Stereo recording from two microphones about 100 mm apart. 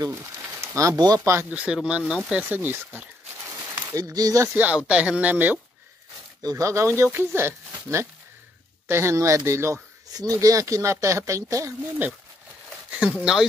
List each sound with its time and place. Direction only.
0.0 s speech: 30° right (ahead or behind)
1.5 s speech: 10° right (ahead or behind)
3.9 s speech: 40° right (ahead or behind)
4.6 s speech: 15° right (ahead or behind)
6.4 s speech: 30° right (ahead or behind)
12.9 s speech: 10° right (ahead or behind)